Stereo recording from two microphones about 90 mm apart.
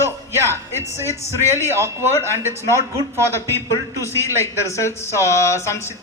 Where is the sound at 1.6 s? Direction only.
30° right (ahead or behind).